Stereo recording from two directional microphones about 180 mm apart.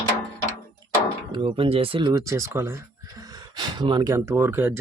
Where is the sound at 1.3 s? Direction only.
30° right (ahead or behind).